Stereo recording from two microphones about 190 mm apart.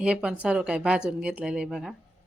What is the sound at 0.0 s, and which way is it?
Speech, 5° right (ahead or behind).